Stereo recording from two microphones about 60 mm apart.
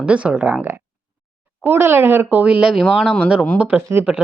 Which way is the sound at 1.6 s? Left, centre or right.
Right.